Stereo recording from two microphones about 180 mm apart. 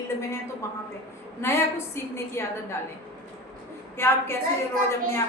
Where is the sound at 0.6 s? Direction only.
15° left (ahead or behind).